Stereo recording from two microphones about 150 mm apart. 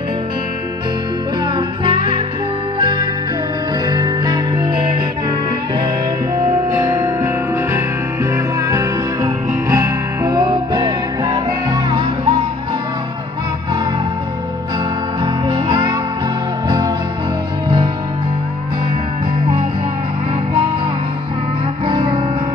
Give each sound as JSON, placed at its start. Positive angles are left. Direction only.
{"t": 1.9, "sound": "music", "side_deg": -35}
{"t": 6.3, "sound": "music", "side_deg": -20}
{"t": 8.6, "sound": "music", "side_deg": -20}
{"t": 15.4, "sound": "music", "side_deg": -30}
{"t": 21.8, "sound": "music", "side_deg": -30}